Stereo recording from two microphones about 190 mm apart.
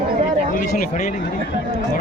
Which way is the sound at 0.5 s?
50° left (ahead or behind).